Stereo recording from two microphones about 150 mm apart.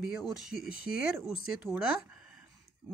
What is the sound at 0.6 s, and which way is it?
Speech, 80° left.